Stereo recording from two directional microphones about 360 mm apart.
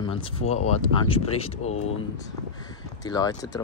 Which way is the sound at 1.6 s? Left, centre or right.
Left.